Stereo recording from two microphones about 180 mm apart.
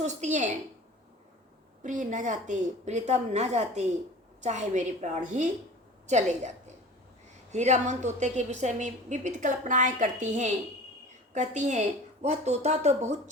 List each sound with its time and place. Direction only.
0.0 s a woman's voice: 40° right (ahead or behind)
1.8 s a woman's voice: 45° right (ahead or behind)
7.5 s a woman's voice: 40° right (ahead or behind)